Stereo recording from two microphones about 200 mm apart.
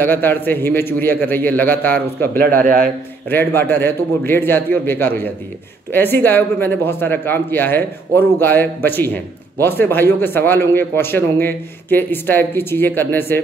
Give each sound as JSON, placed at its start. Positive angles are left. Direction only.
{"t": 0.0, "sound": "a man's voice", "side_deg": 10}
{"t": 2.3, "sound": "a man's voice", "side_deg": -45}
{"t": 3.3, "sound": "a man's voice", "side_deg": 10}